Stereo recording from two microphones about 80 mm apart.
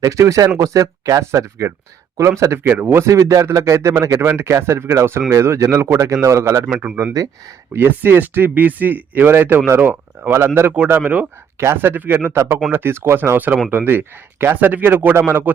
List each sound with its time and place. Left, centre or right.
0.0 s speech: right
2.6 s speech: right
6.7 s speech: centre
7.2 s speech: right
7.7 s speech: right
11.6 s speech: right